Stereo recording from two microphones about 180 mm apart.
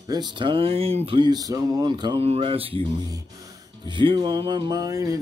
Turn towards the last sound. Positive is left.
turn(degrees=-20)  # may be behind; listen again after turning